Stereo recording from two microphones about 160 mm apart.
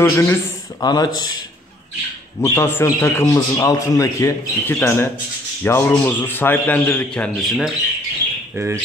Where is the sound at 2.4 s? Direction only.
15° left (ahead or behind).